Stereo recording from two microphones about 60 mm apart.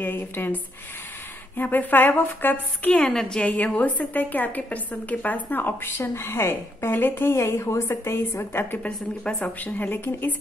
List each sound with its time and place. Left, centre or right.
0.0 s a woman's voice: left
1.6 s a woman's voice: left
3.0 s a woman's voice: centre
3.4 s a woman's voice: left
5.9 s a woman's voice: left
7.3 s a woman's voice: left
9.2 s a woman's voice: centre
9.6 s a woman's voice: left